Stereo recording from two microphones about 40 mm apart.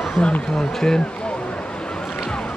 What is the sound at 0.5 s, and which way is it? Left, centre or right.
Speech, centre.